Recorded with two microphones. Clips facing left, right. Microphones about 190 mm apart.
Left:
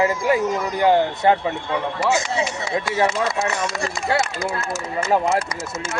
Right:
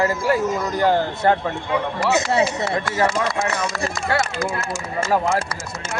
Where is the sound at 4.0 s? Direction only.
20° left (ahead or behind).